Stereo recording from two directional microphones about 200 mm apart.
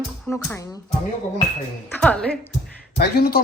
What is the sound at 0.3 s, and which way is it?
Speech, 15° left (ahead or behind).